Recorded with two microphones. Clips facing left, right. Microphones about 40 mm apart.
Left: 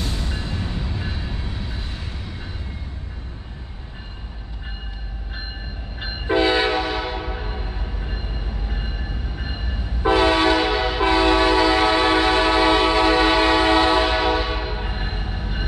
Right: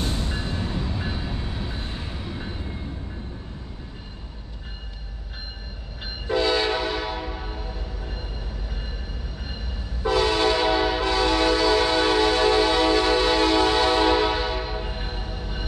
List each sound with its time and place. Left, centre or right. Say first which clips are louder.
0.7 s train: right 1 dB; centre
6.0 s train: left 4 dB; left
8.6 s train: left 5 dB; left